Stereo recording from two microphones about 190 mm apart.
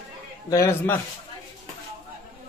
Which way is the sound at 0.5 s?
15° left (ahead or behind).